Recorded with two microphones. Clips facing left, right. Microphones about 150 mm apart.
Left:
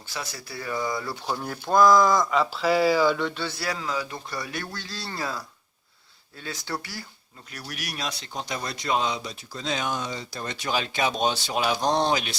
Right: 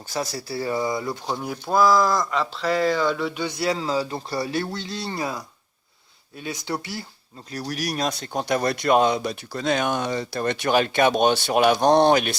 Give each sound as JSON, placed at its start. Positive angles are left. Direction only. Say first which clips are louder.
{"t": 0.1, "sound": "speech", "louder": "right 8 dB", "side_deg": -40}
{"t": 1.4, "sound": "speech", "louder": "left 1 dB", "side_deg": -5}
{"t": 7.5, "sound": "speech", "louder": "right 9 dB", "side_deg": -35}